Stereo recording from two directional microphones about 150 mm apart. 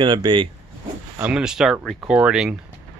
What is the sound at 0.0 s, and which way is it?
Speech, 30° right (ahead or behind).